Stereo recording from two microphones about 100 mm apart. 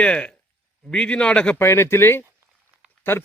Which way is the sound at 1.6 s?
25° left (ahead or behind).